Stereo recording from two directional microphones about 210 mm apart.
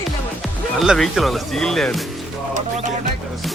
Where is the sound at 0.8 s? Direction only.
Centre (ahead or behind).